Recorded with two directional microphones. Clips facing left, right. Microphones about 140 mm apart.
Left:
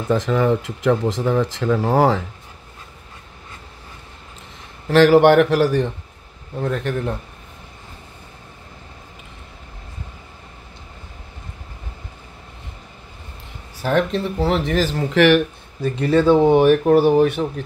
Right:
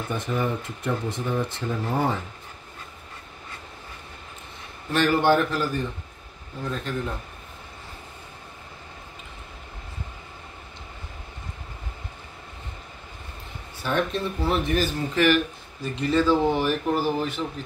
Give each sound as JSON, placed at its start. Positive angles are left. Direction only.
{"t": 0.1, "sound": "speech", "side_deg": 90}
{"t": 4.8, "sound": "speech", "side_deg": 90}
{"t": 6.6, "sound": "speech", "side_deg": 70}
{"t": 13.8, "sound": "speech", "side_deg": 90}